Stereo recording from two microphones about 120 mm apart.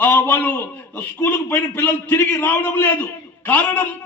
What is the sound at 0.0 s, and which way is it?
A man's voice, 15° left (ahead or behind).